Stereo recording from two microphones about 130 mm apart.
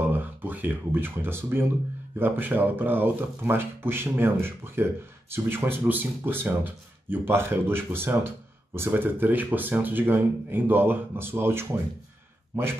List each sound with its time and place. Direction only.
0.0 s speech: 15° right (ahead or behind)